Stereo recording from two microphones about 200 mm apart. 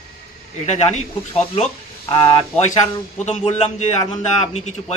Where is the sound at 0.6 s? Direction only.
35° left (ahead or behind).